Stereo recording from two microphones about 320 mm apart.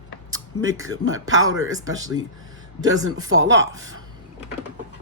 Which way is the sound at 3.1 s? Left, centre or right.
Right.